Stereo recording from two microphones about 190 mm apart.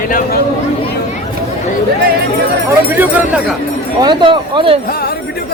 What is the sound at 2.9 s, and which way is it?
Speech, 10° right (ahead or behind).